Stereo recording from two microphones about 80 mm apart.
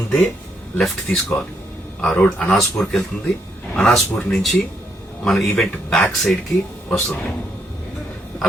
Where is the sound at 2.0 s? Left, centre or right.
Centre.